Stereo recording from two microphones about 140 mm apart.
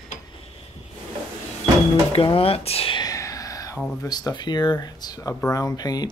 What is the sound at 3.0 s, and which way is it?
Whispering, 25° left (ahead or behind).